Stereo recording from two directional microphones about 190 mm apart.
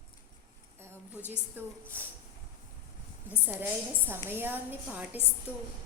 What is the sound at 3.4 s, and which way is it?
A woman's voice, 10° right (ahead or behind).